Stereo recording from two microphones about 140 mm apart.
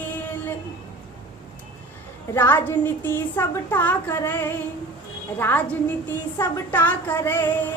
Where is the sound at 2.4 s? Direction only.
15° left (ahead or behind).